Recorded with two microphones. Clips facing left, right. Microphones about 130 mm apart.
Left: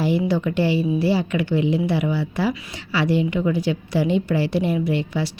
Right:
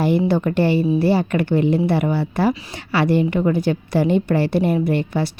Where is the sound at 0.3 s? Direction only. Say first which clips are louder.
Right 3 dB; 50° right (ahead or behind).